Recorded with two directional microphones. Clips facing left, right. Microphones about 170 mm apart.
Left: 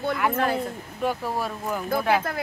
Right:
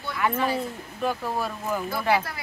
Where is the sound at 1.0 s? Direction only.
10° left (ahead or behind).